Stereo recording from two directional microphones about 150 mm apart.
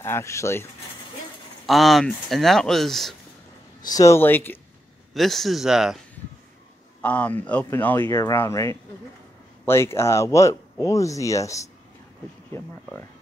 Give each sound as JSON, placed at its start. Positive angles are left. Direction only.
{"t": 0.0, "sound": "speech", "side_deg": 20}
{"t": 1.7, "sound": "speech", "side_deg": 0}
{"t": 3.8, "sound": "speech", "side_deg": 25}
{"t": 5.1, "sound": "speech", "side_deg": 0}
{"t": 7.0, "sound": "speech", "side_deg": 10}